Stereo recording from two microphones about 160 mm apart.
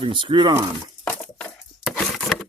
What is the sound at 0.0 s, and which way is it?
Speech, 30° right (ahead or behind).